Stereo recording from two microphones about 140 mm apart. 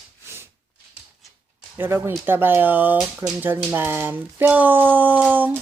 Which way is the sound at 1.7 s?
15° right (ahead or behind).